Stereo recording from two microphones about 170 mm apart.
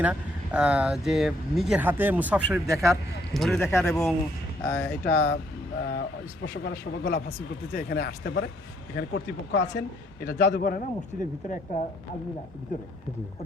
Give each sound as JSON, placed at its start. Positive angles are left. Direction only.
{"t": 0.0, "sound": "speech", "side_deg": -5}
{"t": 2.6, "sound": "a man's voice", "side_deg": -20}
{"t": 3.3, "sound": "speech", "side_deg": 0}
{"t": 3.6, "sound": "speech", "side_deg": 15}
{"t": 5.0, "sound": "a man's voice", "side_deg": 85}
{"t": 9.0, "sound": "speech", "side_deg": 90}
{"t": 9.7, "sound": "a man's voice", "side_deg": 75}
{"t": 10.5, "sound": "a man's voice", "side_deg": 55}